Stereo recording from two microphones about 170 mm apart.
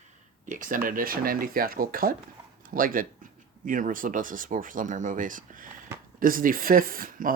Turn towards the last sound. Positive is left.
turn(degrees=-55)  # may be behind; listen again after turning